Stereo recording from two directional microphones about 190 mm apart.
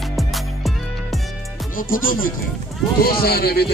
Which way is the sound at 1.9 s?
45° left (ahead or behind).